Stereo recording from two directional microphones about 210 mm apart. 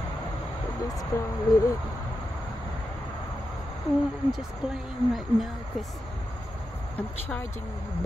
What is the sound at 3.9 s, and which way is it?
Speech, centre (ahead or behind).